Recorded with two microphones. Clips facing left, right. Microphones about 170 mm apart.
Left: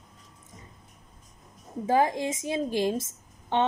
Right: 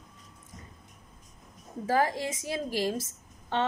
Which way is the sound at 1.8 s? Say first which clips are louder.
Left 3 dB; 20° left (ahead or behind).